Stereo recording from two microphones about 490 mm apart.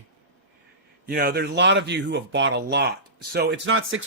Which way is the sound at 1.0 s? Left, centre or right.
Centre.